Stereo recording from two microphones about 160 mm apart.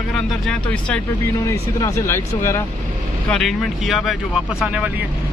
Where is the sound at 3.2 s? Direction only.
5° left (ahead or behind).